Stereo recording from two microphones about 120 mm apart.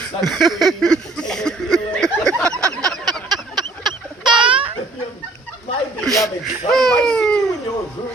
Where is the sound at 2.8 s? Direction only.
5° left (ahead or behind).